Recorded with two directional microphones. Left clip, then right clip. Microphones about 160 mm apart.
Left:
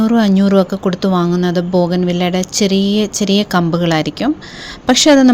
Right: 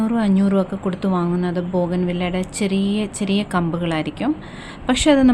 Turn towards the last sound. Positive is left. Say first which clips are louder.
# left 7 dB
turn(degrees=35)  # may be behind; listen again after turning